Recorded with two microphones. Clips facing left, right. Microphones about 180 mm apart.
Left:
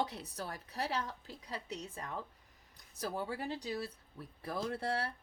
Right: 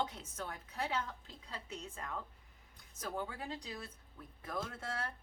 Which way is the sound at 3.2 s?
35° left (ahead or behind).